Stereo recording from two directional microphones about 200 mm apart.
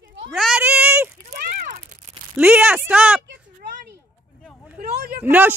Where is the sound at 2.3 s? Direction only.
5° right (ahead or behind).